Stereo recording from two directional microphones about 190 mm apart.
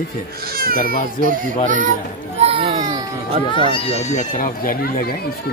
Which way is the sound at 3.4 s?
25° left (ahead or behind).